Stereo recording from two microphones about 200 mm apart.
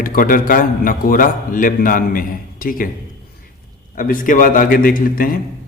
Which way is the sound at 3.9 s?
45° left (ahead or behind).